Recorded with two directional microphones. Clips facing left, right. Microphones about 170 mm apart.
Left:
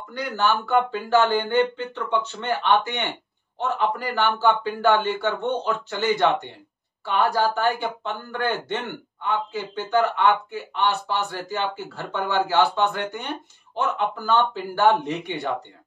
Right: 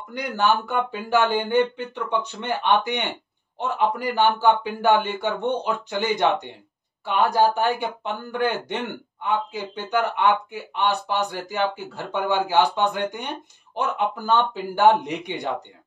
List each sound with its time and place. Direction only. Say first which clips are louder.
0.1 s speech: right 1 dB; 15° right (ahead or behind)